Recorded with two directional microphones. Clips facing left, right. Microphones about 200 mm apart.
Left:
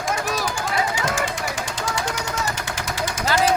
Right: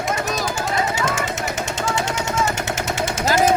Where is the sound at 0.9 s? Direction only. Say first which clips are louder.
Right 1 dB; 25° right (ahead or behind).